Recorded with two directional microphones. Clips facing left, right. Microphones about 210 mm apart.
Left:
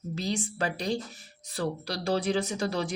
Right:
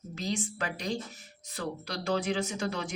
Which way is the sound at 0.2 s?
35° left (ahead or behind).